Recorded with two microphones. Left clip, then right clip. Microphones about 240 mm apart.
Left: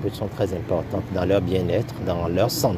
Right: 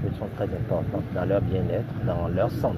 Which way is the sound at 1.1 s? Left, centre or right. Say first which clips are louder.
Left 5 dB; left.